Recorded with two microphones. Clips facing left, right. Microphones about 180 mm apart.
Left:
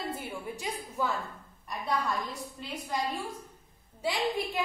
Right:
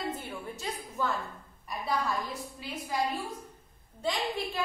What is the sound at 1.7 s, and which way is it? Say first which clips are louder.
A woman's voice: even; centre (ahead or behind).